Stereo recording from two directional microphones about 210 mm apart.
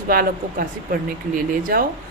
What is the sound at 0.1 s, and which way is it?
Speech, 45° right (ahead or behind).